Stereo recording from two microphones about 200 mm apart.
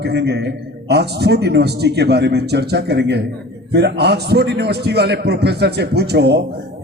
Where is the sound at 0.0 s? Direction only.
60° right (ahead or behind).